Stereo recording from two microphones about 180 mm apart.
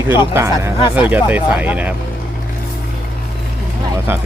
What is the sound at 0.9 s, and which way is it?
Speech, 10° right (ahead or behind).